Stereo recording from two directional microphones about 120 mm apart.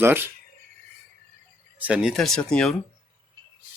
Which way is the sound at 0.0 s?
20° right (ahead or behind).